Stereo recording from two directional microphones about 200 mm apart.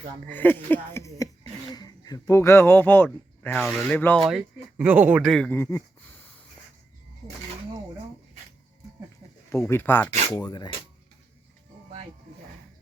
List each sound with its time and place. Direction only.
0.3 s speech: 10° left (ahead or behind)
9.5 s speech: 15° left (ahead or behind)
10.4 s speech: 20° left (ahead or behind)